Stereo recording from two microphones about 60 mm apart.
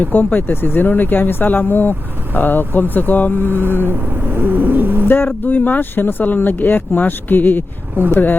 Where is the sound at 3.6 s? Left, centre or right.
Right.